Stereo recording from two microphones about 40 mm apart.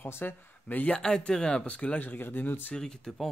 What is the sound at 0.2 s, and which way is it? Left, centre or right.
Speech, left.